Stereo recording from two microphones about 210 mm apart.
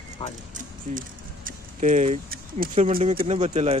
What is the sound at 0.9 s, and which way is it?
Speech, 40° right (ahead or behind).